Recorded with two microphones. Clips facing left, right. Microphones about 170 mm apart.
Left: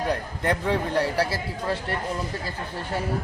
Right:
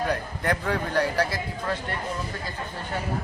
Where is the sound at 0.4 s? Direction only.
30° left (ahead or behind).